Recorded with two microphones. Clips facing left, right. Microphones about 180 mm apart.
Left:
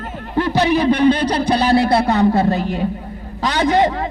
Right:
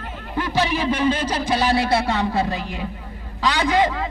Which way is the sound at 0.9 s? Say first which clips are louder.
Left 6 dB; 60° left (ahead or behind).